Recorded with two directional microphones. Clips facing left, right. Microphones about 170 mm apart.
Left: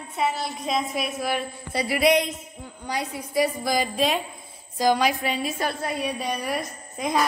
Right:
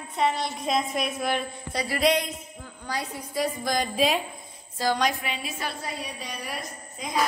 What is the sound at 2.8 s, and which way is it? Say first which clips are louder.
A woman's voice: left 3 dB; 15° left (ahead or behind).